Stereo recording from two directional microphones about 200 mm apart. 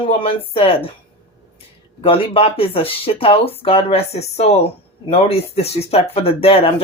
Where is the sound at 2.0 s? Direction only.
25° left (ahead or behind).